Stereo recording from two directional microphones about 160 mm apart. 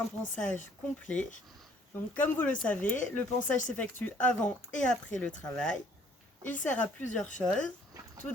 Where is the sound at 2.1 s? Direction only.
10° left (ahead or behind).